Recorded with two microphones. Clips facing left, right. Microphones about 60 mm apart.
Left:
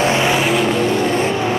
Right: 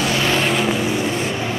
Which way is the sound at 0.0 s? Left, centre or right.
Left.